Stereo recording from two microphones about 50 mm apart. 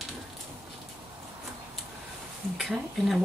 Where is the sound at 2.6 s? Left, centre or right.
Centre.